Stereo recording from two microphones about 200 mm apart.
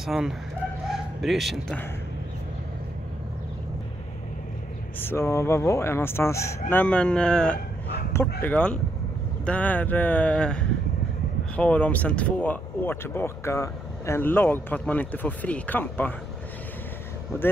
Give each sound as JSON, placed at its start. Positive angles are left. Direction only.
{"t": 0.0, "sound": "speech", "side_deg": 0}
{"t": 5.0, "sound": "speech", "side_deg": 15}
{"t": 17.3, "sound": "speech", "side_deg": 10}